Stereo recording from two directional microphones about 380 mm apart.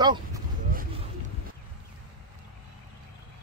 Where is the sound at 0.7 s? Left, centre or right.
Right.